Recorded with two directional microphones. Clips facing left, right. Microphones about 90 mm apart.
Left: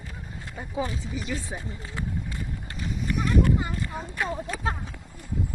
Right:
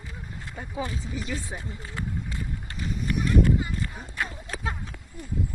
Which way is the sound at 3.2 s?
45° left (ahead or behind).